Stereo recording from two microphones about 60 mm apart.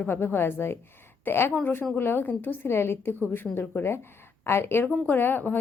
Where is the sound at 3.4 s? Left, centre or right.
Centre.